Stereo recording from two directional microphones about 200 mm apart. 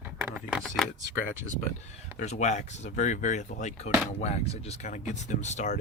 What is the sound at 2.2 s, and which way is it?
Speech, 35° left (ahead or behind).